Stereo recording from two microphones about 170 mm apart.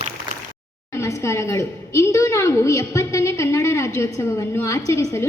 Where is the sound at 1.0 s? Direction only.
15° left (ahead or behind).